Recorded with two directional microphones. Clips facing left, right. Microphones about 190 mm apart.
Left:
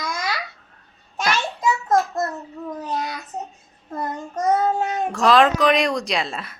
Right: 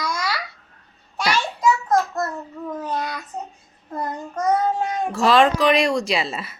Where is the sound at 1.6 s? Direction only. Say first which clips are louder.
Right 1 dB; 25° left (ahead or behind).